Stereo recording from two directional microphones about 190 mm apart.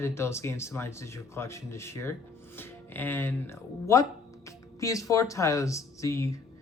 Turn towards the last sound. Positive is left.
turn(degrees=15)  # may be behind; listen again after turning